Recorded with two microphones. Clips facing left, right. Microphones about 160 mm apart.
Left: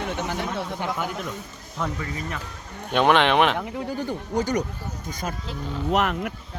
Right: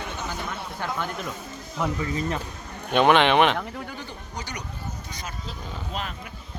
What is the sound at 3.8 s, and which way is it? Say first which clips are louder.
Speech: left 9 dB; 45° left (ahead or behind).